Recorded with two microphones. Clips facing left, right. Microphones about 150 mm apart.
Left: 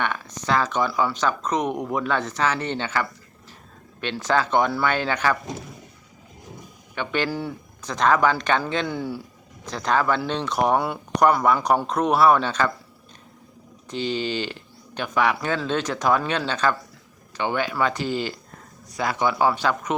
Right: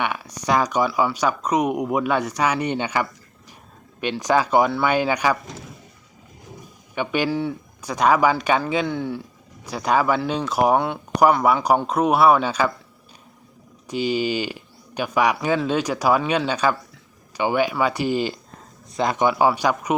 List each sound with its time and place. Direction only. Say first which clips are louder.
0.0 s speech: right 2 dB; 10° right (ahead or behind)
4.2 s speech: right 3 dB; 15° right (ahead or behind)
6.9 s speech: right 3 dB; 10° right (ahead or behind)
7.3 s speech: right 5 dB; centre (ahead or behind)
7.8 s speech: right 2 dB; 10° right (ahead or behind)
8.9 s speech: right 2 dB; 5° left (ahead or behind)
9.6 s speech: right 2 dB; 10° right (ahead or behind)
10.8 s speech: right 2 dB; 5° left (ahead or behind)
11.5 s speech: right 2 dB; 5° right (ahead or behind)
13.8 s speech: right 4 dB; 10° right (ahead or behind)